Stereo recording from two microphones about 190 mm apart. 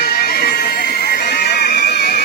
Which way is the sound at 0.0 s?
55° left (ahead or behind).